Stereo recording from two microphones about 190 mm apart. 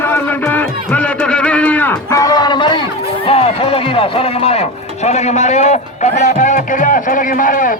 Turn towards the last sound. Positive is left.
turn(degrees=45)  # may be behind; listen again after turning